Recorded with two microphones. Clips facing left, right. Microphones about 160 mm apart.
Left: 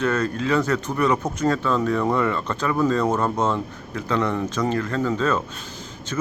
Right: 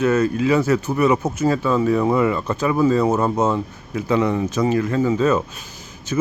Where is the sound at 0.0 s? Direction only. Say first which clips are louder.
Right 5 dB; 10° right (ahead or behind).